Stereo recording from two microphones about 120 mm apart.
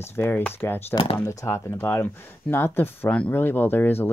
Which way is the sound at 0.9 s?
45° left (ahead or behind).